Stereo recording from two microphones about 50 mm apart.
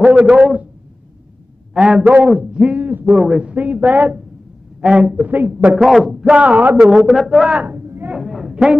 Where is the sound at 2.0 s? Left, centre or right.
Right.